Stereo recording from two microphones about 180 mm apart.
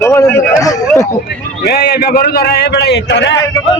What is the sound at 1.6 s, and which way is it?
A man's voice, 60° left (ahead or behind).